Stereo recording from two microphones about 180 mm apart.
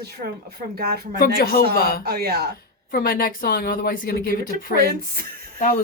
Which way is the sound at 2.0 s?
60° right (ahead or behind).